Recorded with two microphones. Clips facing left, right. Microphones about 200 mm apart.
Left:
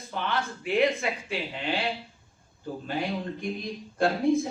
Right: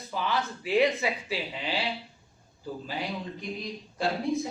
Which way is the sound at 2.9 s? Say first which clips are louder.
Left 5 dB; 50° left (ahead or behind).